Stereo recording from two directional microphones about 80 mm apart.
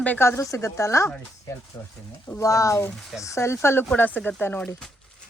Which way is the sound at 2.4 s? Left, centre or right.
Left.